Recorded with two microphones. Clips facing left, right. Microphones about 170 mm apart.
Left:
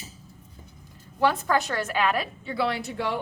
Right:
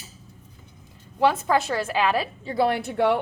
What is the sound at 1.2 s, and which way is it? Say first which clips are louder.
A woman's voice: right 2 dB; 25° right (ahead or behind).